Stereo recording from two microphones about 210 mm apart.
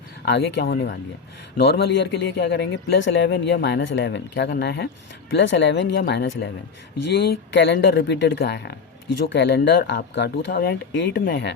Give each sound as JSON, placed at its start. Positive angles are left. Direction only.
{"t": 0.3, "sound": "speech", "side_deg": 55}